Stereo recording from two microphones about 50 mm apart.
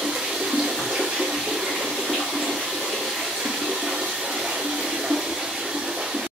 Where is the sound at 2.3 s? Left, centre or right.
Centre.